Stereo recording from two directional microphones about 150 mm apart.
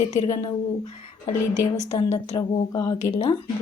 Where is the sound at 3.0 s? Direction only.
50° left (ahead or behind).